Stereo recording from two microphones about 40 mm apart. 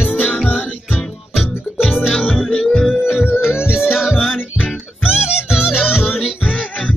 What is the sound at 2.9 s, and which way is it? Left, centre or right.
Music, centre.